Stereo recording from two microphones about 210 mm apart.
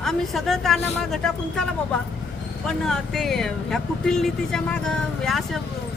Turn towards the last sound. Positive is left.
turn(degrees=0)  # may be behind; listen again after turning